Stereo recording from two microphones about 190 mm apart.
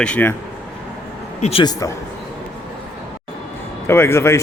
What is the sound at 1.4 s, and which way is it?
Speech, 25° left (ahead or behind).